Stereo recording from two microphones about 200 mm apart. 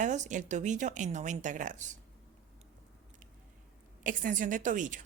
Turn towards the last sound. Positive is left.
turn(degrees=-40)  # may be behind; listen again after turning